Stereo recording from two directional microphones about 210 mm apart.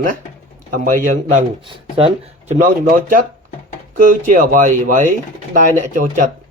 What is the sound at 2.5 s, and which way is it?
Speech, 35° right (ahead or behind).